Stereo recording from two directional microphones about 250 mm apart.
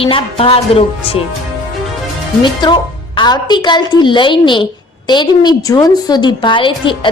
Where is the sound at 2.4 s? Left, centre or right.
Centre.